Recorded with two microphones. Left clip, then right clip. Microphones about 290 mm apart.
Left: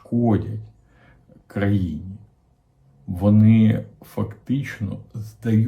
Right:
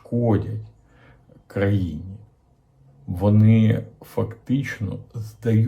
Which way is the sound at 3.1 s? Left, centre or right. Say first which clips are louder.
Left 2 dB; centre.